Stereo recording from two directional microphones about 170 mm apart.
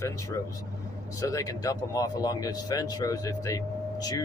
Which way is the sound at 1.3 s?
20° left (ahead or behind).